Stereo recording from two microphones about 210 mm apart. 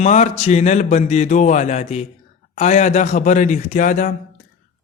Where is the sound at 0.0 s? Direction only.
35° left (ahead or behind).